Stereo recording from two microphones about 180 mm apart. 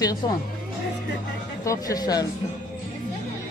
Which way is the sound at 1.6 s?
20° left (ahead or behind).